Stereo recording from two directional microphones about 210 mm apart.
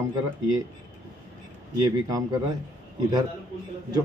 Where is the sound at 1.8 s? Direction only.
20° right (ahead or behind).